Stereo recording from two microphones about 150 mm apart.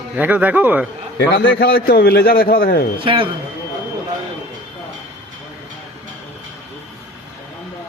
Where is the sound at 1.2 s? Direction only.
90° left.